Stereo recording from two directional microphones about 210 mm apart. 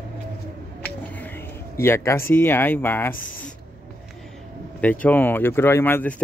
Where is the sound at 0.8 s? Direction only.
10° left (ahead or behind).